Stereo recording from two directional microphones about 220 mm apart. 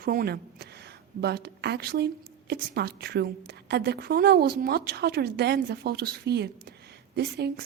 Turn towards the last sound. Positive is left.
turn(degrees=-45)  # may be behind; listen again after turning